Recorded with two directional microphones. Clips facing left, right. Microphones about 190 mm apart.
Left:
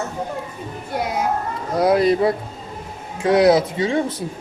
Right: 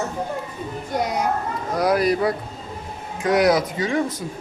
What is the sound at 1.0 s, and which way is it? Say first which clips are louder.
Speech: even; 5° left (ahead or behind).